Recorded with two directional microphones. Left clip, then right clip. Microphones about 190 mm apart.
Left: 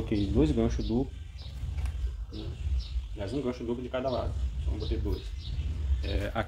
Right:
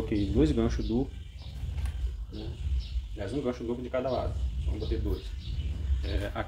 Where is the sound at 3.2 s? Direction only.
25° left (ahead or behind).